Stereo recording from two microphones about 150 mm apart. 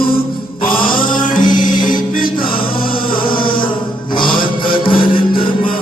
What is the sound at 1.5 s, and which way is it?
Music, 60° left (ahead or behind).